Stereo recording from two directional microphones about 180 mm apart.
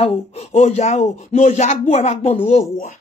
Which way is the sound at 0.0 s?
35° left (ahead or behind).